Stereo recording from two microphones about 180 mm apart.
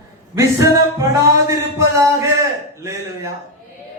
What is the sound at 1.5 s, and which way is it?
Speech, 15° right (ahead or behind).